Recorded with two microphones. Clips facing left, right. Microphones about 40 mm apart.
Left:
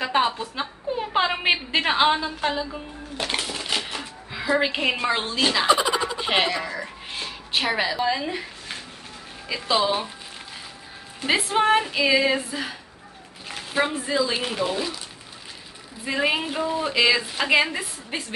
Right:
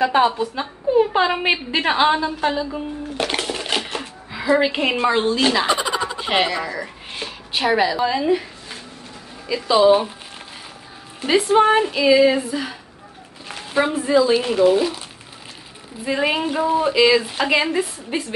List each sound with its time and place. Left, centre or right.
0.0 s a woman's voice: centre
3.3 s a sound: centre
3.8 s a sound: centre
5.4 s speech: centre
9.5 s a woman's voice: centre
11.5 s a woman's voice: centre
13.5 s a sound: centre
14.4 s a woman's voice: centre
16.1 s a woman's voice: centre
16.9 s a woman's voice: centre